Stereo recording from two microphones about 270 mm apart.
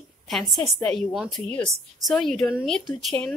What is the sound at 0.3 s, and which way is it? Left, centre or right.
Speech, centre.